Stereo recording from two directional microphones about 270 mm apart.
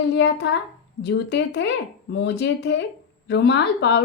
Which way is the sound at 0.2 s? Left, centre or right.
Left.